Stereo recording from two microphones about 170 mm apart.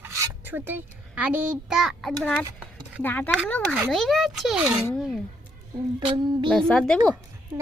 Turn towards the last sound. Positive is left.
turn(degrees=5)  # may be behind; listen again after turning